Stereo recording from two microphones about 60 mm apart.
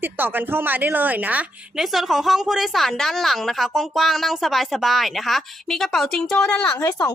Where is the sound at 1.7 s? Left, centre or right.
Centre.